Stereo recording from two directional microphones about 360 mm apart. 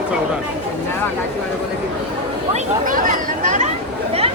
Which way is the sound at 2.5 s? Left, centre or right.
Right.